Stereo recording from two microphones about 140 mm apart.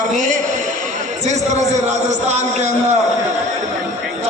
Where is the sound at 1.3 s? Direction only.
55° right (ahead or behind).